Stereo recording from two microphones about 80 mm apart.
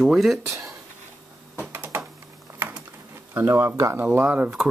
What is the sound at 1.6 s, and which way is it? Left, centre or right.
Typing, right.